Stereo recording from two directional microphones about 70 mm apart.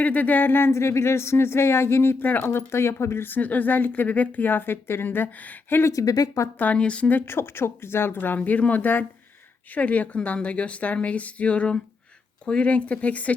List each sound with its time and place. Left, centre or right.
0.0 s speech: left
5.8 s speech: left
6.6 s speech: centre
7.2 s a woman's voice: left